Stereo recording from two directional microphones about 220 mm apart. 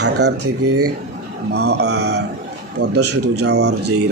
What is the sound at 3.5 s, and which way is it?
Speech, 50° right (ahead or behind).